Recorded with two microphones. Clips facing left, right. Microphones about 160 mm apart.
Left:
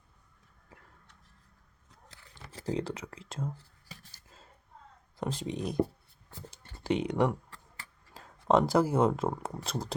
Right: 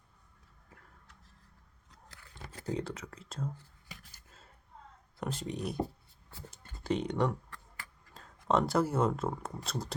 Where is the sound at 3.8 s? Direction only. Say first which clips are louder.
Left 1 dB; 30° left (ahead or behind).